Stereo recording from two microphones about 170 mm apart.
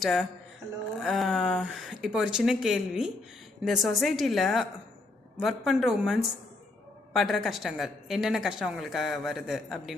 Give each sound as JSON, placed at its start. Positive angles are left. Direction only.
{"t": 0.0, "sound": "a woman's voice", "side_deg": 0}